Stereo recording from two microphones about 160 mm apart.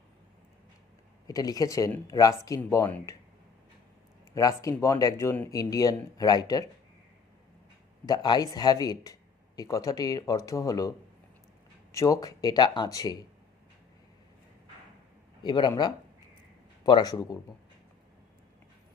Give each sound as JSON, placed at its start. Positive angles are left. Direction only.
{"t": 1.3, "sound": "speech", "side_deg": 20}
{"t": 4.4, "sound": "speech", "side_deg": 20}
{"t": 8.0, "sound": "speech", "side_deg": 25}
{"t": 15.4, "sound": "speech", "side_deg": 25}